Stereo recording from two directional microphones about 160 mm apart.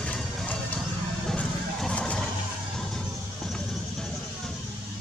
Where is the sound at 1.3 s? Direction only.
5° left (ahead or behind).